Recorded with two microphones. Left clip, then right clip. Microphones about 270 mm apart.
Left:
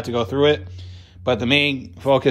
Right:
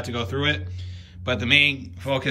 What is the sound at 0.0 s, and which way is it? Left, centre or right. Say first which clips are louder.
Speech: left 7 dB; centre.